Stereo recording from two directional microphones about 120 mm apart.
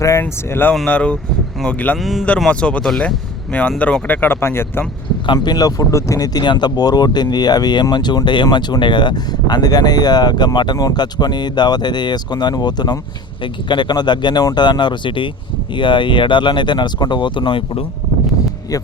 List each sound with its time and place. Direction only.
0.0 s speech: 25° left (ahead or behind)
2.0 s speech: centre (ahead or behind)
2.2 s speech: 10° left (ahead or behind)
5.2 s speech: 40° left (ahead or behind)